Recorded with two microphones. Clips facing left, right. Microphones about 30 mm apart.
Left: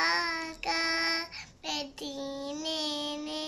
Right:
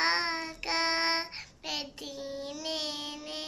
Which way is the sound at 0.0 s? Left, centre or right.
Centre.